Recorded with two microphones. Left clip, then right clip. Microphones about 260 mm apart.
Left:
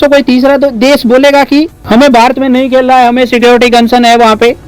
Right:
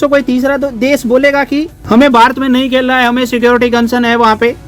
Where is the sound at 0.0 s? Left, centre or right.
Centre.